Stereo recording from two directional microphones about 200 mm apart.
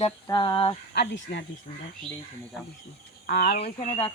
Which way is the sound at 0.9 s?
55° left (ahead or behind).